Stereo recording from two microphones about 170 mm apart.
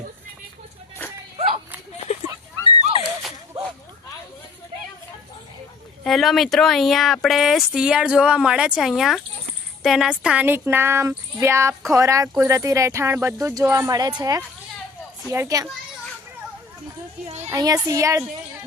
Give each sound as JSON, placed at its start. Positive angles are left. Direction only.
{"t": 1.4, "sound": "a sound", "side_deg": -35}
{"t": 6.1, "sound": "speech", "side_deg": 0}
{"t": 17.5, "sound": "speech", "side_deg": -20}